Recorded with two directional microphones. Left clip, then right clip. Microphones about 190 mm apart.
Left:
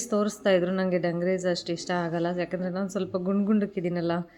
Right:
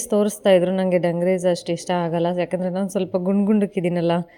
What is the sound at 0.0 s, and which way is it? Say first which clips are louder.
A woman's voice: right 7 dB; 35° right (ahead or behind).